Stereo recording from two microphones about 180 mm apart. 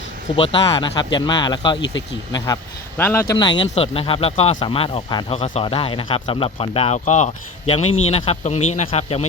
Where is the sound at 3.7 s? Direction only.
30° left (ahead or behind).